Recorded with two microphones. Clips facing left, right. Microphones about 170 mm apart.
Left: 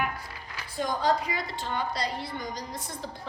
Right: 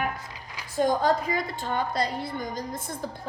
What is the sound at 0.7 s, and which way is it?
A woman's voice, 45° right (ahead or behind).